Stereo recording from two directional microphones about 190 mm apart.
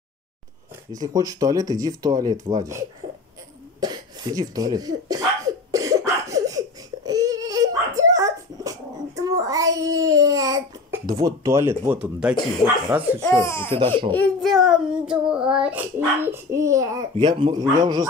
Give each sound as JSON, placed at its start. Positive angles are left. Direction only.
{"t": 1.0, "sound": "speech", "side_deg": -20}
{"t": 3.8, "sound": "speech", "side_deg": -20}
{"t": 5.7, "sound": "cough", "side_deg": -15}
{"t": 7.1, "sound": "dog", "side_deg": -20}
{"t": 12.9, "sound": "speech", "side_deg": -10}
{"t": 13.4, "sound": "speech", "side_deg": 15}
{"t": 13.7, "sound": "speech", "side_deg": -30}
{"t": 14.1, "sound": "child singing", "side_deg": 5}
{"t": 17.4, "sound": "speech", "side_deg": -20}